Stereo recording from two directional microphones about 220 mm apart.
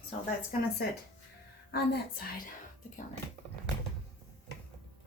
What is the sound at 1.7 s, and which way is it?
Speech, 45° left (ahead or behind).